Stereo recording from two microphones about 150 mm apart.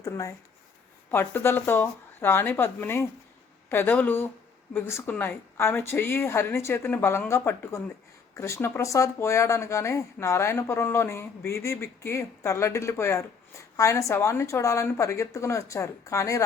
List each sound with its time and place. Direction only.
0.0 s a woman's voice: 20° left (ahead or behind)